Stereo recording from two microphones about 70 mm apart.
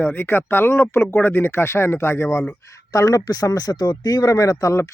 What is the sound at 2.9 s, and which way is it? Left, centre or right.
Speech, left.